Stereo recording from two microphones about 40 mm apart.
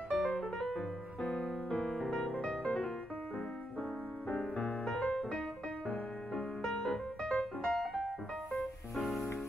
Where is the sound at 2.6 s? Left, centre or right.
Left.